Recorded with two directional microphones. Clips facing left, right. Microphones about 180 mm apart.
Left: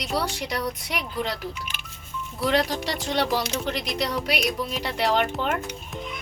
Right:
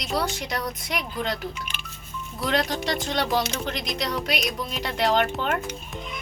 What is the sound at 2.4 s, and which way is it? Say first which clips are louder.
Speech: left 2 dB; 10° left (ahead or behind).